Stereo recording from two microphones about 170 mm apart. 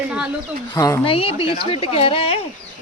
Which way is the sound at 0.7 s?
20° left (ahead or behind).